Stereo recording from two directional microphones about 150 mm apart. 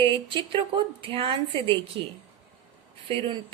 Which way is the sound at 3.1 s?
35° right (ahead or behind).